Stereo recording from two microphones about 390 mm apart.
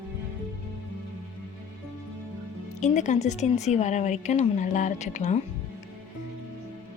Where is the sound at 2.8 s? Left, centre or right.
Centre.